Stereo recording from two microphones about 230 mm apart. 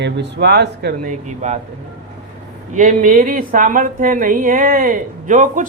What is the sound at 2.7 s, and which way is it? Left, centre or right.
A woman's voice, right.